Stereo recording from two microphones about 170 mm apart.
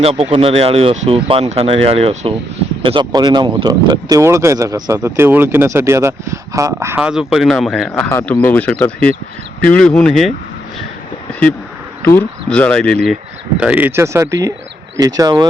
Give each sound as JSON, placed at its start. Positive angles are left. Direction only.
{"t": 0.0, "sound": "speech", "side_deg": -35}
{"t": 12.0, "sound": "speech", "side_deg": 10}
{"t": 13.6, "sound": "speech", "side_deg": -10}